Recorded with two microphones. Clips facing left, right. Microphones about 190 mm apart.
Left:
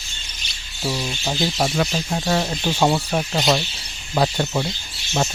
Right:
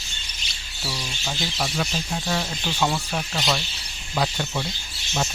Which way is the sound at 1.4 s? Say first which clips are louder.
Left 7 dB; 55° left (ahead or behind).